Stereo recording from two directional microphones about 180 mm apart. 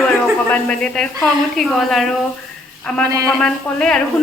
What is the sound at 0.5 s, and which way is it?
A woman's voice, 5° left (ahead or behind).